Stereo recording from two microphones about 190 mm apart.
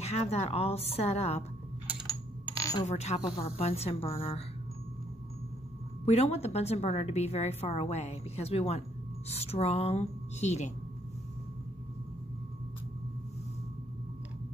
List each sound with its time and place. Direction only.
0.0 s a woman's voice: 35° left (ahead or behind)
2.5 s a sound: 15° left (ahead or behind)
2.9 s a woman's voice: 35° left (ahead or behind)
6.0 s a woman's voice: 35° left (ahead or behind)